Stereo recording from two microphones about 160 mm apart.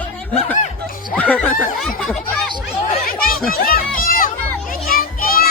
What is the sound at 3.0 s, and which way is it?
Chatter, 65° left (ahead or behind).